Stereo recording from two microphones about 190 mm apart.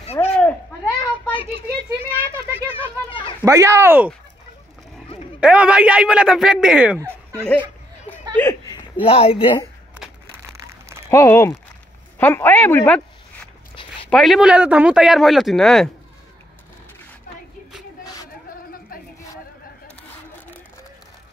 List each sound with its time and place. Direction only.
0.0 s a sound: 35° left (ahead or behind)
1.3 s a sound: 30° left (ahead or behind)
2.0 s children playing: 30° left (ahead or behind)
3.4 s speech: 15° right (ahead or behind)
5.4 s speech: 5° right (ahead or behind)
8.4 s a sound: 15° left (ahead or behind)
9.0 s speech: 30° left (ahead or behind)
11.1 s a woman's voice: 15° left (ahead or behind)
14.0 s speech: centre (ahead or behind)